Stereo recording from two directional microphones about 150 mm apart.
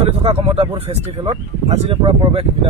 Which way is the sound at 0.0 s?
40° right (ahead or behind).